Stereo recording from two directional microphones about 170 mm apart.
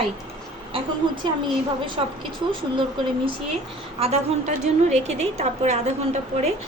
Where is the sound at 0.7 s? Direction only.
30° right (ahead or behind).